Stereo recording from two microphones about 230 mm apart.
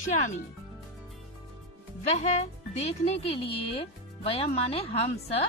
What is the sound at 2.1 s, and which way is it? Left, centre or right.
Speech, left.